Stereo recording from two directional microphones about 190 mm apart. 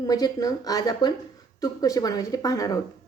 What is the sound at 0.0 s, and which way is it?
A woman's voice, 20° left (ahead or behind).